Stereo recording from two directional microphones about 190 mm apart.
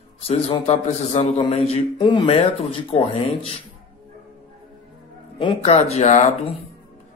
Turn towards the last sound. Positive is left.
turn(degrees=35)  # may be behind; listen again after turning